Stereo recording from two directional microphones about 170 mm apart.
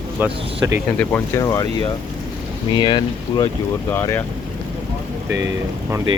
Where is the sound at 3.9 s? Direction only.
15° left (ahead or behind).